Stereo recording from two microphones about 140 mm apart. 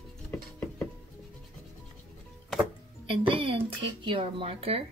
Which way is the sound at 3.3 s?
35° right (ahead or behind).